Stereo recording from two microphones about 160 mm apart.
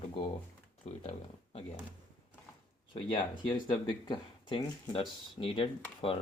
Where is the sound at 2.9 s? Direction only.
35° left (ahead or behind).